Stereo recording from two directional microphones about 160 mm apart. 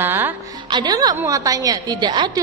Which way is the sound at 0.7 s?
25° right (ahead or behind).